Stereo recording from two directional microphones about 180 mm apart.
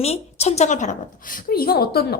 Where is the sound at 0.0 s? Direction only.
35° left (ahead or behind).